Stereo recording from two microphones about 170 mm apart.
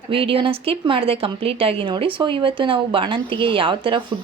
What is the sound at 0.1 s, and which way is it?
Speech, 30° right (ahead or behind).